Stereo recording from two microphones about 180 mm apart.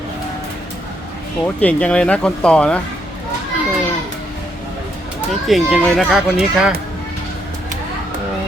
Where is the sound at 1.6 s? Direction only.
5° left (ahead or behind).